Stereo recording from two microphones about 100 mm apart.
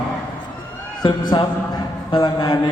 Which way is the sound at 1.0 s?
50° left (ahead or behind).